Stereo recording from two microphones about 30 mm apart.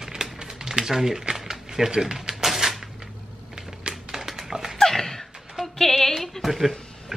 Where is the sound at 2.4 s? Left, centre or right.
Centre.